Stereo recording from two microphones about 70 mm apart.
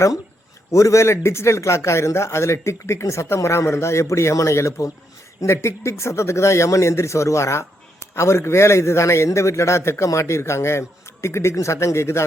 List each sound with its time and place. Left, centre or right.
0.7 s a man's voice: left